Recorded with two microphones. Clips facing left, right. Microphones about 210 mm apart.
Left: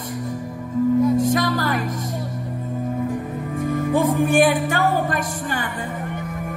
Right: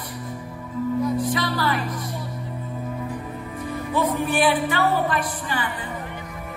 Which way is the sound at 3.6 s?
50° left (ahead or behind).